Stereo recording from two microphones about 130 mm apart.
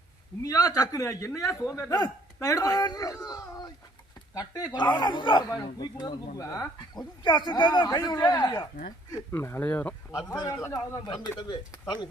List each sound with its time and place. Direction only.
0.4 s speech: 30° left (ahead or behind); by 9.9 s 15° left (ahead or behind)
10.1 s speech: 25° left (ahead or behind)